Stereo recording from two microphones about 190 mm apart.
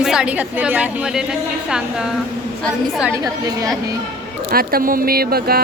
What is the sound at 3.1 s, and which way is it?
Speech, 15° right (ahead or behind).